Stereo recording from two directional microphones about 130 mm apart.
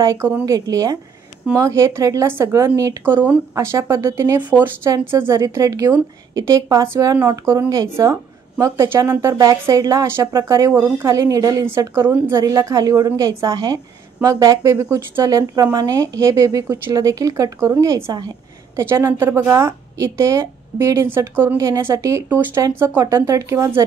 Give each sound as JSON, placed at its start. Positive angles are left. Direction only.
{"t": 0.0, "sound": "speech", "side_deg": -25}
{"t": 4.4, "sound": "speech", "side_deg": -15}